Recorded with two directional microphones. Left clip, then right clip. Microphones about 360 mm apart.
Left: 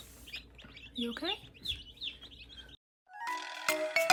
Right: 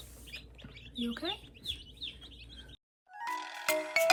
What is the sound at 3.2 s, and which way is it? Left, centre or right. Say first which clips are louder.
Music: even; centre.